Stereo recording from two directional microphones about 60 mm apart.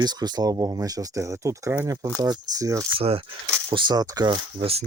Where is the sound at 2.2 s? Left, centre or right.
Right.